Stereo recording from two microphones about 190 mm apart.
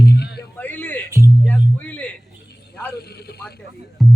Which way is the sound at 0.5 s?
10° left (ahead or behind).